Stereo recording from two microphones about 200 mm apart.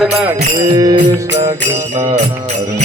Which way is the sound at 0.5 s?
20° right (ahead or behind).